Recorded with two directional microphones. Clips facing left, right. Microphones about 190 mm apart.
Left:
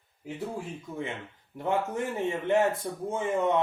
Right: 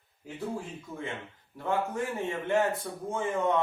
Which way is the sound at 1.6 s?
20° left (ahead or behind).